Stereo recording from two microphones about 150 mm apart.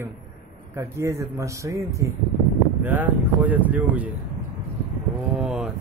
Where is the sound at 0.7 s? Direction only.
20° right (ahead or behind).